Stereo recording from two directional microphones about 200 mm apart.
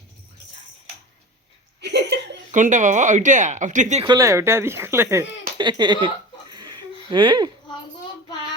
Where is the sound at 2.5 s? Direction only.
40° right (ahead or behind).